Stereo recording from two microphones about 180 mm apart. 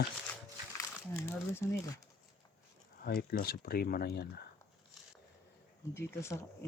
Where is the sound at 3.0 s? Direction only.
55° left (ahead or behind).